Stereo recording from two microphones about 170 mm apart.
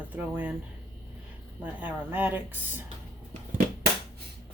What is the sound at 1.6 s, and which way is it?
Speech, 10° right (ahead or behind).